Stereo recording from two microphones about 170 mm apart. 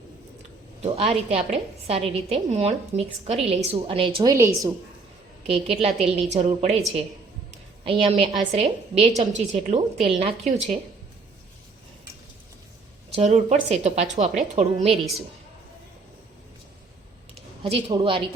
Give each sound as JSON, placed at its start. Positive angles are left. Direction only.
{"t": 0.8, "sound": "a woman's voice", "side_deg": -35}
{"t": 4.2, "sound": "a woman's voice", "side_deg": -20}
{"t": 5.5, "sound": "a woman's voice", "side_deg": -35}
{"t": 7.9, "sound": "a woman's voice", "side_deg": -30}
{"t": 13.1, "sound": "a woman's voice", "side_deg": -40}
{"t": 17.6, "sound": "a woman's voice", "side_deg": -35}